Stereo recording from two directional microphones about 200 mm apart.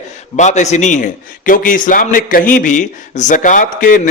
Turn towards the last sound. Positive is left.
turn(degrees=40)  # may be behind; listen again after turning